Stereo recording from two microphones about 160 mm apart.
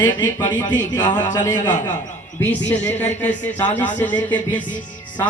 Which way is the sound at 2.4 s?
10° left (ahead or behind).